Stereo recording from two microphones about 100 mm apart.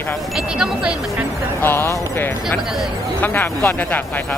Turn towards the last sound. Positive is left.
turn(degrees=20)  # may be behind; listen again after turning